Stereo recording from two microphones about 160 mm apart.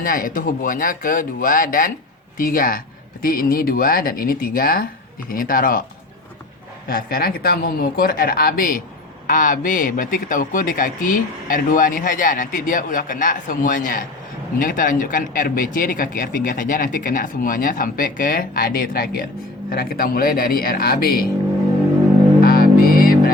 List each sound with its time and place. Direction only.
0.0 s a man's voice: 60° left (ahead or behind)
6.8 s a man's voice: 65° left (ahead or behind)
22.4 s music: 65° left (ahead or behind)